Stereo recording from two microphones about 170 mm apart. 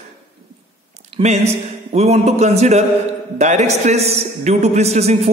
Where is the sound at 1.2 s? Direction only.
35° right (ahead or behind).